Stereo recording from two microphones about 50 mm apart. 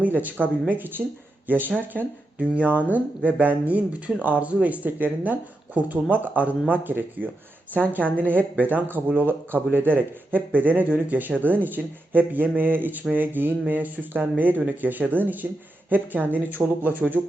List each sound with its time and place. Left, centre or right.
0.0 s speech: right